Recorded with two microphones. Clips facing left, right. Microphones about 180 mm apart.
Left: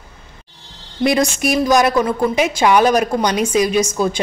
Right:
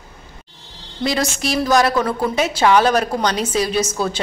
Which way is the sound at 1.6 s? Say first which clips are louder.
Left 1 dB; 15° left (ahead or behind).